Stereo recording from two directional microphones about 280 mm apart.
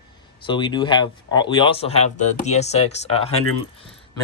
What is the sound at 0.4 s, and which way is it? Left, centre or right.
Speech, centre.